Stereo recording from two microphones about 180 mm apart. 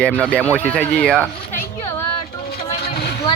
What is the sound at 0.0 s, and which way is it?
A woman's voice, 10° left (ahead or behind).